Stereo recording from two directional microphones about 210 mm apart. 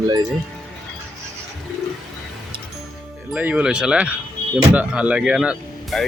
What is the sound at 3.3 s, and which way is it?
Speech, 5° right (ahead or behind).